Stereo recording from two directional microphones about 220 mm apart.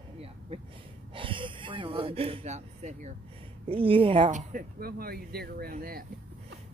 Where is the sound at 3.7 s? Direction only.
25° right (ahead or behind); by 6.0 s 40° right (ahead or behind).